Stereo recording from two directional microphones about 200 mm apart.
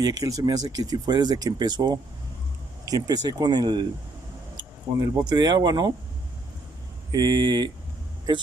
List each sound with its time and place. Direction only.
0.0 s speech: 20° right (ahead or behind)
5.0 s speech: 20° right (ahead or behind)
7.1 s speech: 20° right (ahead or behind)